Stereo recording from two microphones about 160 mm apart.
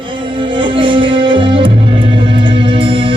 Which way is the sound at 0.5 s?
30° right (ahead or behind).